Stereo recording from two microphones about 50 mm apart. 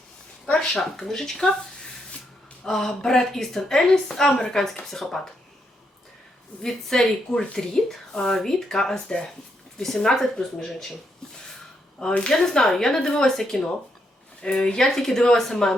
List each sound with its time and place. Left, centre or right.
0.7 s speech: centre
2.6 s speech: centre
6.6 s a woman's voice: centre
11.9 s speech: centre
12.3 s a woman's voice: centre
14.4 s speech: centre